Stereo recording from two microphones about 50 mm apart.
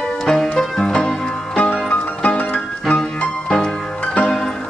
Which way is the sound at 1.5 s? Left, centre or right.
Left.